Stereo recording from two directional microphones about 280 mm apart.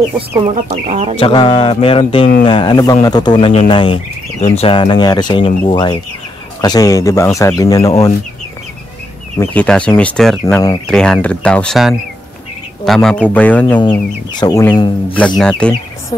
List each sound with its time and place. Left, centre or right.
0.7 s speech: right
1.2 s speech: centre
9.4 s speech: centre